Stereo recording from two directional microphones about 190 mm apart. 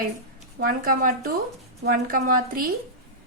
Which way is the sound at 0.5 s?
50° right (ahead or behind).